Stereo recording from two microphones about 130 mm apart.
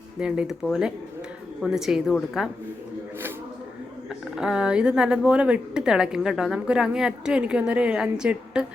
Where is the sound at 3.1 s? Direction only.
15° right (ahead or behind).